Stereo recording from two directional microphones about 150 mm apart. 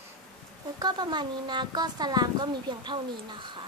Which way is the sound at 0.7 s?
30° right (ahead or behind).